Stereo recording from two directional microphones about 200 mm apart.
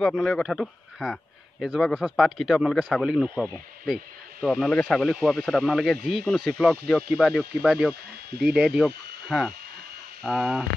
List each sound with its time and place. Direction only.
0.0 s speech: centre (ahead or behind)